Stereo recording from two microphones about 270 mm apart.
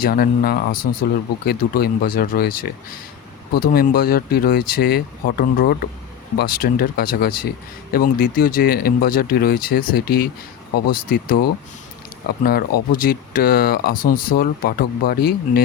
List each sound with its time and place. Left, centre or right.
0.0 s speech: left